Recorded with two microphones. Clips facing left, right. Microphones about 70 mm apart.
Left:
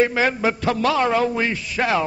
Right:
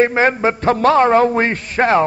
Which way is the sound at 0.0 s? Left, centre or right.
Right.